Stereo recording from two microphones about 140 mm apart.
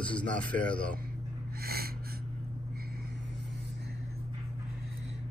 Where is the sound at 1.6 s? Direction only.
90° right.